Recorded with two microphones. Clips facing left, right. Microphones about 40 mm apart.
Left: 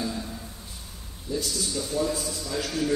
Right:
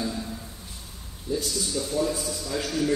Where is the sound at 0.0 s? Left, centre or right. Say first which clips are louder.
Right 1 dB; centre.